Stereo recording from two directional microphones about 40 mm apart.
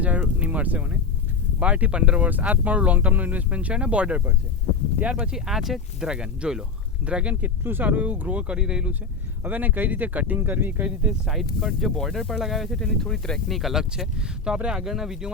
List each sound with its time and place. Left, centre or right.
0.0 s speech: right
2.2 s speech: right
5.3 s speech: centre
6.1 s speech: centre
7.0 s speech: right
7.6 s speech: right
7.9 s speech: right
8.4 s speech: right
9.4 s speech: right
11.3 s speech: centre
12.8 s speech: centre
13.5 s speech: centre
14.2 s speech: centre